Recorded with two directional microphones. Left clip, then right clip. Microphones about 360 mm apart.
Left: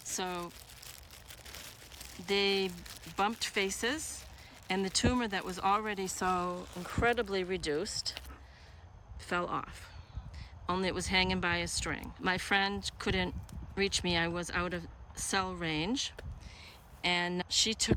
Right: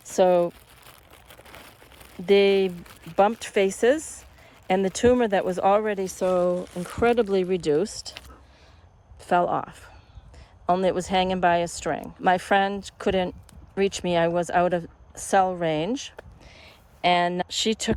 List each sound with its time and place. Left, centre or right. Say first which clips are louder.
0.0 s speech: right 19 dB; centre
0.9 s crumpling: right 3 dB; centre
2.2 s speech: right 12 dB; centre
2.7 s speech: right 4 dB; centre
3.2 s speech: right 11 dB; centre
5.0 s speech: right 13 dB; centre
6.4 s speech: right 13 dB; right
7.2 s speech: right 11 dB; centre
9.2 s speech: right 12 dB; centre